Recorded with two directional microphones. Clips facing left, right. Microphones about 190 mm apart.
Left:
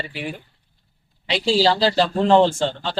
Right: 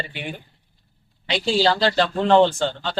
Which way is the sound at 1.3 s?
Centre (ahead or behind).